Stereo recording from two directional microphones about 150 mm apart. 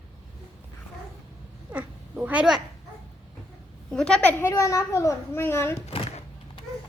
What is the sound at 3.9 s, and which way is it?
A child's voice, 5° left (ahead or behind).